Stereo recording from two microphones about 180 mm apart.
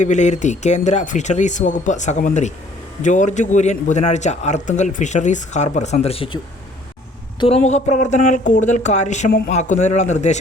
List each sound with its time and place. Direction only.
0.0 s a man's voice: 40° left (ahead or behind)